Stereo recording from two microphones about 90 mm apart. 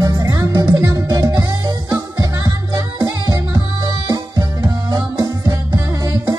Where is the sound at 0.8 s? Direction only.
35° right (ahead or behind).